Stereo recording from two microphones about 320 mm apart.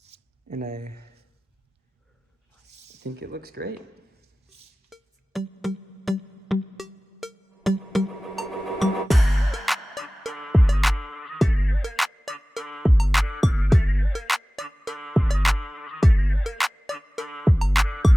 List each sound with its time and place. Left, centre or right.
0.0 s a sound: right
3.0 s speech: right
4.9 s music: centre